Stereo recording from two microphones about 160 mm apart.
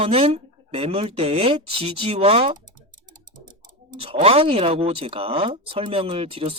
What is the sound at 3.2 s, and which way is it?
Bird, 55° right (ahead or behind).